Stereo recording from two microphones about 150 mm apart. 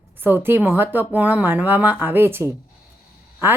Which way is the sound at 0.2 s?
15° right (ahead or behind).